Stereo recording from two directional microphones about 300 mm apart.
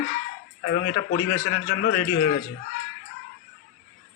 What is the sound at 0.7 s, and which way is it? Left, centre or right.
A man's voice, left.